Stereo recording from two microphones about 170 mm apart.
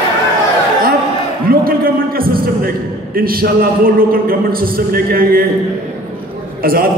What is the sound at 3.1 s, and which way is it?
A man's voice, 60° right (ahead or behind).